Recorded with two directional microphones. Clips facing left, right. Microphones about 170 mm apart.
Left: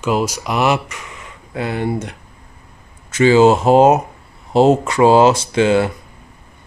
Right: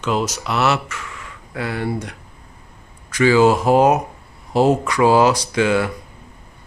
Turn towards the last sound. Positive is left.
turn(degrees=25)  # may be behind; listen again after turning